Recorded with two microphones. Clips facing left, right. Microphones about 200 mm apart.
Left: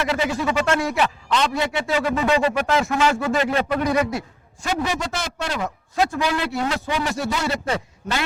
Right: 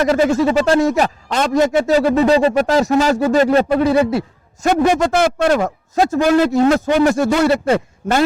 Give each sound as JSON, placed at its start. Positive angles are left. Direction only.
{"t": 0.0, "sound": "a man's voice", "side_deg": -45}
{"t": 0.4, "sound": "a man's voice", "side_deg": -35}
{"t": 3.8, "sound": "speech", "side_deg": -30}
{"t": 4.6, "sound": "a man's voice", "side_deg": -45}